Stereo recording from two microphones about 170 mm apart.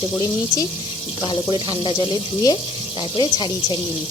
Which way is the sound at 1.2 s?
30° left (ahead or behind).